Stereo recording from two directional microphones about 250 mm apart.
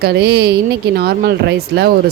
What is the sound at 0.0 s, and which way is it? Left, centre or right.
Speech, right.